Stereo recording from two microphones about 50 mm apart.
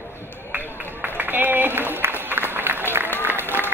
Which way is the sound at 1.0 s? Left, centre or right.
Right.